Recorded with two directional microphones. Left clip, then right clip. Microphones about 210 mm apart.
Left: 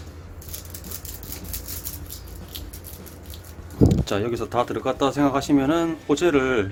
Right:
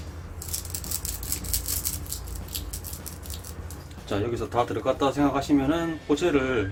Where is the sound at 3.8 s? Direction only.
40° left (ahead or behind).